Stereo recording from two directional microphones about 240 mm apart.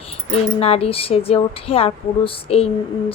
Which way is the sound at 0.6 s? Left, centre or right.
Left.